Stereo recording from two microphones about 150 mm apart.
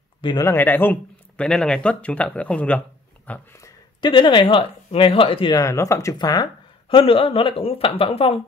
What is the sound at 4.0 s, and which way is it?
Speech, 30° left (ahead or behind).